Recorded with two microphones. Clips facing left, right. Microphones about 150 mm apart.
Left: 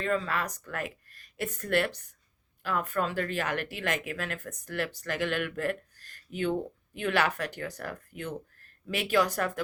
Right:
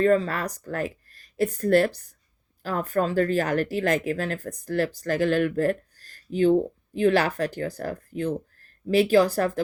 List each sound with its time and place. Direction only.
0.0 s speech: 40° right (ahead or behind)